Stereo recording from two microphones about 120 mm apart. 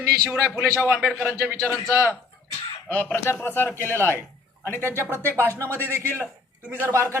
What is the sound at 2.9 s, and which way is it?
Speech, 15° left (ahead or behind).